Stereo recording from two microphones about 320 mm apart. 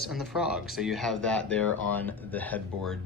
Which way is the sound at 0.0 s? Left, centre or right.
Centre.